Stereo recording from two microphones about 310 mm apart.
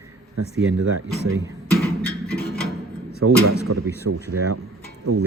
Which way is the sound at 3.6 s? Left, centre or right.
Right.